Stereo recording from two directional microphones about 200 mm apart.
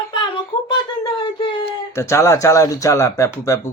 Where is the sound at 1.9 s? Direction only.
15° left (ahead or behind).